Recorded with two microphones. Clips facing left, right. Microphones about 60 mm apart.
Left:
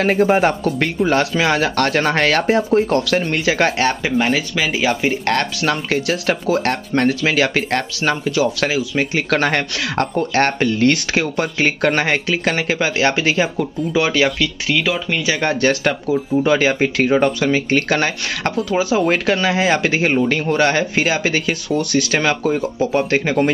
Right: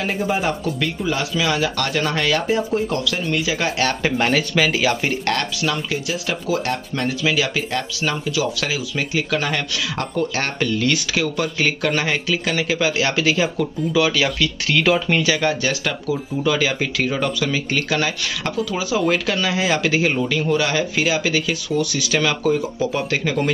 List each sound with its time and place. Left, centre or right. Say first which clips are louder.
0.0 s speech: left 7 dB; left
4.0 s speech: left 1 dB; centre
4.7 s speech: left 2 dB; left
5.6 s speech: left 4 dB; left
10.1 s speech: left 5 dB; left
14.9 s speech: right 3 dB; centre
15.4 s speech: left 4 dB; left